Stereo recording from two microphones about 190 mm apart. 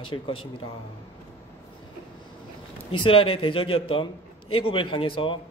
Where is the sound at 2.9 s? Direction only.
30° left (ahead or behind).